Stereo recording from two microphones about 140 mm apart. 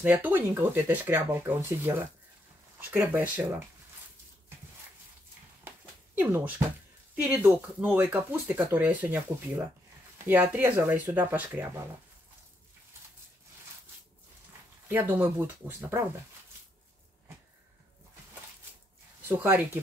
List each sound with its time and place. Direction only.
0.0 s speech: 10° right (ahead or behind)
6.1 s speech: 10° right (ahead or behind)
14.9 s speech: 15° right (ahead or behind)
19.2 s speech: 15° right (ahead or behind)